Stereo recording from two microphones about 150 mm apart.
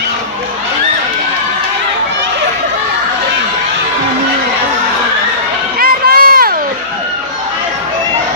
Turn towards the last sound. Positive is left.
turn(degrees=-80)